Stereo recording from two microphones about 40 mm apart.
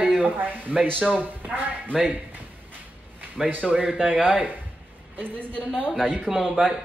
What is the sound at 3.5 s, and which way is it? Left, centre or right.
Speech, right.